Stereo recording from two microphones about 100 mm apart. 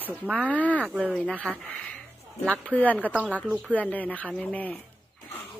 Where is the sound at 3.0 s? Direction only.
15° right (ahead or behind).